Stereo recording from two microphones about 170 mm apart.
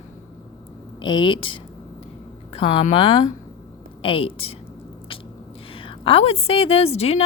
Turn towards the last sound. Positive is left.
turn(degrees=35)  # may be behind; listen again after turning